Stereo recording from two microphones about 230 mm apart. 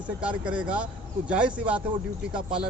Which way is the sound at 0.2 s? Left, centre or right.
Centre.